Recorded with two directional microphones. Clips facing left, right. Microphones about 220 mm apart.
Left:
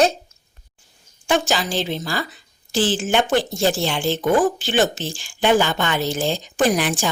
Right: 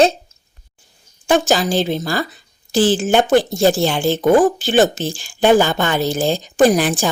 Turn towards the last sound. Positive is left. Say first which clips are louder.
# right 5 dB
turn(degrees=-35)  # may be behind; listen again after turning